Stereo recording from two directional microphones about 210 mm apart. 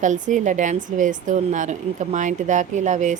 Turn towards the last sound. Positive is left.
turn(degrees=-35)  # may be behind; listen again after turning